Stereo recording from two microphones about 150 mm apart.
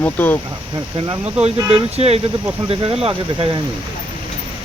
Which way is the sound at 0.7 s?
30° right (ahead or behind).